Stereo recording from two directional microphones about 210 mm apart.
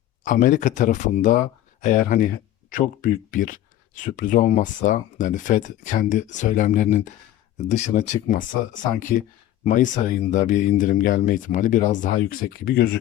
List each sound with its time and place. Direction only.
0.3 s speech: 40° left (ahead or behind)